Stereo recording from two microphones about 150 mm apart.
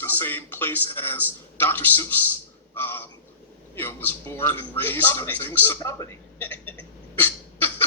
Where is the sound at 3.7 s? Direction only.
15° left (ahead or behind).